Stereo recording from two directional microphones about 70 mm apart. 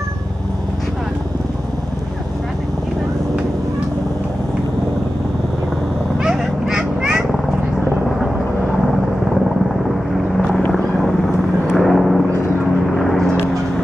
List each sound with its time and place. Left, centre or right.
6.2 s fowl: centre
9.8 s vehicle: centre